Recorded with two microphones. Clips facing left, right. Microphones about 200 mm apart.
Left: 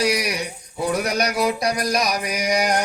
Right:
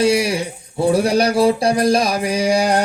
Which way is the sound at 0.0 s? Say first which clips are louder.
Right 6 dB; 25° right (ahead or behind).